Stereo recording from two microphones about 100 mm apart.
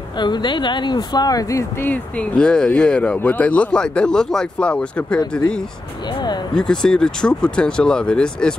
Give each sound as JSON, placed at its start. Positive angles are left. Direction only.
{"t": 0.2, "sound": "speech", "side_deg": 50}
{"t": 1.8, "sound": "speech", "side_deg": 15}